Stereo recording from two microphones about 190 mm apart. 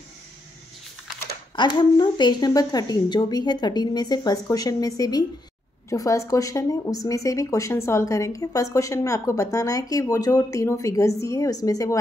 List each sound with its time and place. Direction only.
1.5 s speech: 25° left (ahead or behind)